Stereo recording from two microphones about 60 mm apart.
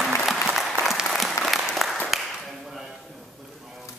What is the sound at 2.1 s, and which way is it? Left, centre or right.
Clapping, centre.